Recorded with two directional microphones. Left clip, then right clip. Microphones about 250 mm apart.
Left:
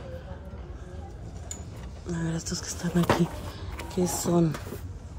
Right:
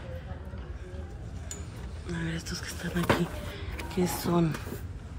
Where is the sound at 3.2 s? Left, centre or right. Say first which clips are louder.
Left 3 dB; centre.